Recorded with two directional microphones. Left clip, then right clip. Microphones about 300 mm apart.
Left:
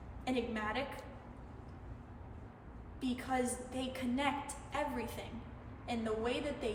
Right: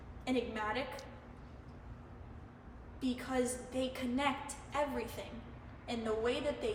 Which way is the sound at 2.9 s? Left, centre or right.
Centre.